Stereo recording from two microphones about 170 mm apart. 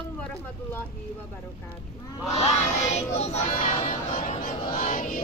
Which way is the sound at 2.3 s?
40° left (ahead or behind).